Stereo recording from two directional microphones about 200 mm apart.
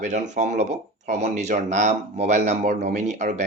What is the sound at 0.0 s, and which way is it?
Speech, 35° right (ahead or behind).